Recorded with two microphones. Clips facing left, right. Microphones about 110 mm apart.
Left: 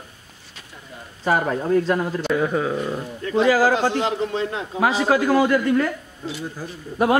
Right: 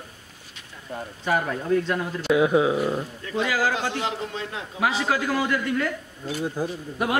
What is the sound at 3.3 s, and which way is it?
A man's voice, 40° left (ahead or behind).